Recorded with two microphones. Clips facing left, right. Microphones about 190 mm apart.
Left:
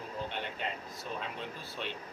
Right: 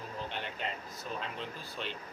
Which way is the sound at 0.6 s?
Centre (ahead or behind).